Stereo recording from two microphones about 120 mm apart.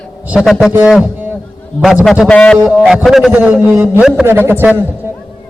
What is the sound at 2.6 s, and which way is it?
Speech, 5° right (ahead or behind).